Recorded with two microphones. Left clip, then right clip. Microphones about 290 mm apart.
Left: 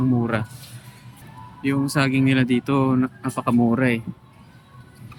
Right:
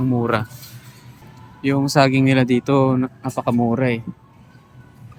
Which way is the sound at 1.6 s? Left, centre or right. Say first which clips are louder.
Right 6 dB; centre.